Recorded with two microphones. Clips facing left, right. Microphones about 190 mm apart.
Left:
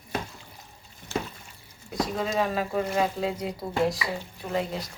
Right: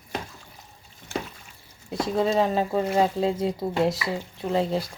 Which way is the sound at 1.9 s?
30° right (ahead or behind).